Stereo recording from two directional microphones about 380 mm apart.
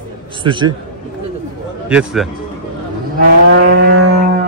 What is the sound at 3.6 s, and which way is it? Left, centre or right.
Vehicle, right.